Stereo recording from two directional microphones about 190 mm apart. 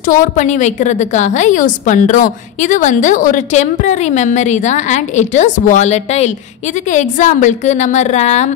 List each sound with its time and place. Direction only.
0.0 s a woman's voice: 45° left (ahead or behind)